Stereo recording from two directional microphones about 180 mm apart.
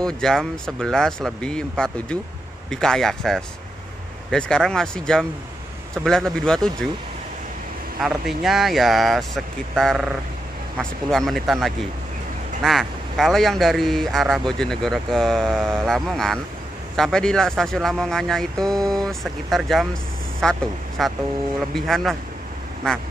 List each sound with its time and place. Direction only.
0.0 s speech: 5° left (ahead or behind)
8.0 s speech: centre (ahead or behind)
20.4 s vehicle: 5° left (ahead or behind)
21.0 s speech: centre (ahead or behind)